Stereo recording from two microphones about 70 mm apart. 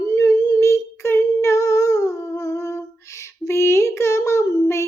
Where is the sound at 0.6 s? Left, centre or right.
Left.